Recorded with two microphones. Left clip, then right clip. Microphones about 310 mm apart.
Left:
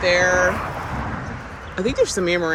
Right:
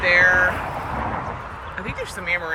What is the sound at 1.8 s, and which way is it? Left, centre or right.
Speech, centre.